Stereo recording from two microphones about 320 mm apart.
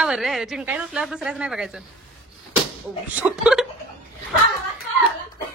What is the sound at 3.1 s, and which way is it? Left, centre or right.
Speech, centre.